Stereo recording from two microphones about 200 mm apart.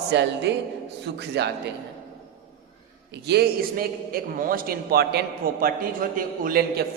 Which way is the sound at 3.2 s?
55° right (ahead or behind).